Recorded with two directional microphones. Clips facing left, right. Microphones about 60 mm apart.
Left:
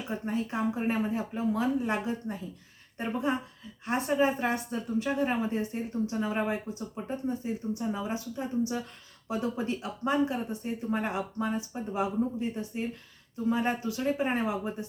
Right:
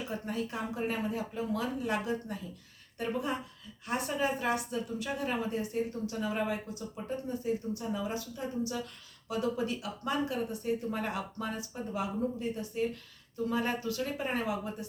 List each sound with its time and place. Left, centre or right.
0.1 s speech: left